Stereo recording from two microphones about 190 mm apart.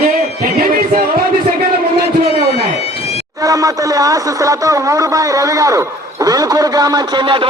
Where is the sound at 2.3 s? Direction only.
30° left (ahead or behind).